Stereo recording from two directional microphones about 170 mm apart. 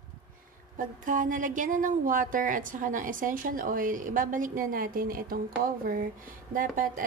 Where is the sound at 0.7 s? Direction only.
50° right (ahead or behind).